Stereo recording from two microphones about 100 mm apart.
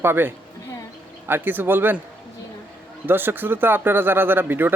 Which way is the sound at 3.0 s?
20° right (ahead or behind).